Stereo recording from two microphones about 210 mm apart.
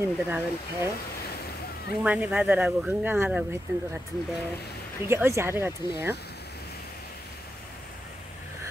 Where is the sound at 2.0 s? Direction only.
5° right (ahead or behind).